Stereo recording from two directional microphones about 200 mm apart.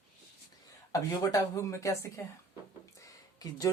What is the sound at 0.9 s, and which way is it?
Speech, 15° left (ahead or behind).